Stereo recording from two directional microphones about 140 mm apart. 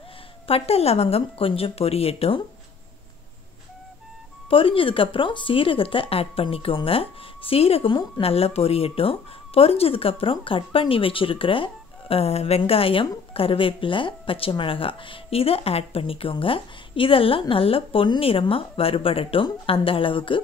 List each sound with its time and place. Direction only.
0.5 s speech: 45° left (ahead or behind)
4.5 s speech: 40° left (ahead or behind)